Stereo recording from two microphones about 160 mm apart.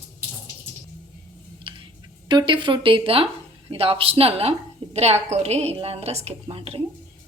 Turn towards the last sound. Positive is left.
turn(degrees=-35)  # may be behind; listen again after turning